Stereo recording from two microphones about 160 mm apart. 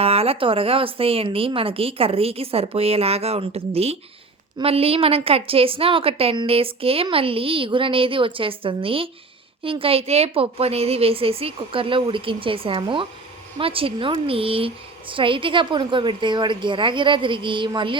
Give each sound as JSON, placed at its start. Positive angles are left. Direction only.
{"t": 0.0, "sound": "a woman's voice", "side_deg": -40}